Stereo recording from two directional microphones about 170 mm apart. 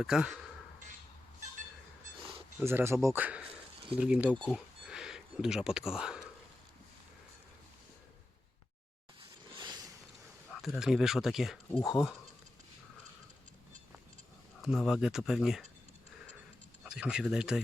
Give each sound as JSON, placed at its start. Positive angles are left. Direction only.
{"t": 0.0, "sound": "speech", "side_deg": -5}
{"t": 2.6, "sound": "speech", "side_deg": -15}
{"t": 4.4, "sound": "speech", "side_deg": 5}
{"t": 9.6, "sound": "a sound", "side_deg": -25}
{"t": 10.5, "sound": "speech", "side_deg": 0}
{"t": 14.6, "sound": "speech", "side_deg": 0}
{"t": 16.8, "sound": "speech", "side_deg": -5}